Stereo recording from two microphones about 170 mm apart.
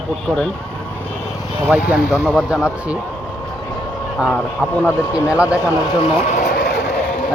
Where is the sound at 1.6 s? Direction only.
10° right (ahead or behind).